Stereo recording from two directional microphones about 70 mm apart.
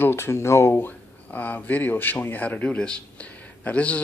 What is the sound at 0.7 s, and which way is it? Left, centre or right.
Speech, left.